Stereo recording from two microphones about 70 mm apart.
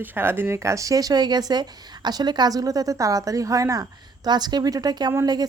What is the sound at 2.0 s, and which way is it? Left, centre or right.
Speech, right.